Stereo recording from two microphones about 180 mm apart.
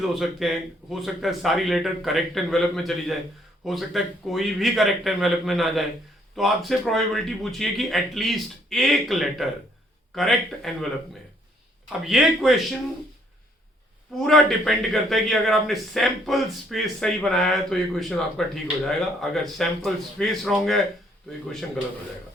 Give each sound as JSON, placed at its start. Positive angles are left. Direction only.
{"t": 0.0, "sound": "a man's voice", "side_deg": 0}
{"t": 11.9, "sound": "a man's voice", "side_deg": -5}
{"t": 14.2, "sound": "a man's voice", "side_deg": 0}